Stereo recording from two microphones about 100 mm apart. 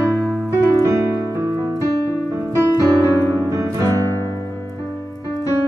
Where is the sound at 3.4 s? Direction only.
35° right (ahead or behind).